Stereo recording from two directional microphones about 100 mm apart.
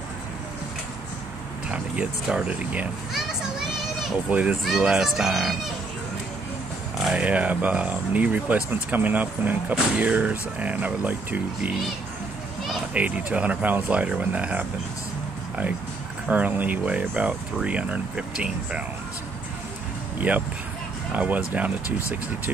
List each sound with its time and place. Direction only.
1.7 s speech: 10° right (ahead or behind)
3.1 s children playing: 5° right (ahead or behind)
4.3 s speech: 15° right (ahead or behind)
7.0 s a sound: centre (ahead or behind)
7.2 s speech: 15° right (ahead or behind)
12.9 s speech: 15° right (ahead or behind)
16.3 s speech: 15° right (ahead or behind)
20.2 s speech: 15° right (ahead or behind)